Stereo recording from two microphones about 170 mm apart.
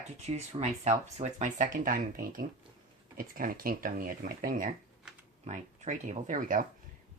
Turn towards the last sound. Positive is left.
turn(degrees=-50)  # may be behind; listen again after turning